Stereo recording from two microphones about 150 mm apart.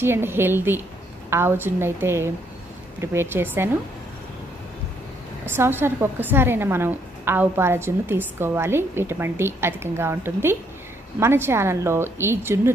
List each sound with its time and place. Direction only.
0.0 s a woman's voice: 15° right (ahead or behind)
5.5 s a woman's voice: 15° right (ahead or behind)